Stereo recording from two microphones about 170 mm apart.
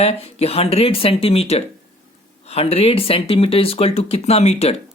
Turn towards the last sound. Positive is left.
turn(degrees=40)  # may be behind; listen again after turning